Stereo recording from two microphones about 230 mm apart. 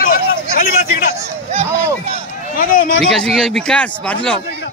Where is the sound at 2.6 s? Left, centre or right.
Left.